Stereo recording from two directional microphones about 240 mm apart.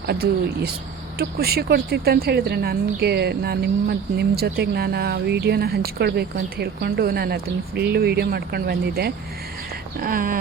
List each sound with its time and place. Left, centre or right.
0.1 s speech: right